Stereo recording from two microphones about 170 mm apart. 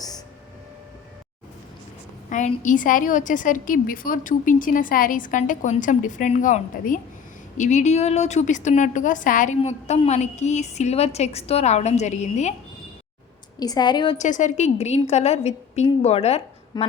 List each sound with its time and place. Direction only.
2.3 s a woman's voice: 45° left (ahead or behind)
13.6 s a woman's voice: 25° left (ahead or behind)
14.2 s a woman's voice: 45° left (ahead or behind)
16.7 s a woman's voice: 25° left (ahead or behind)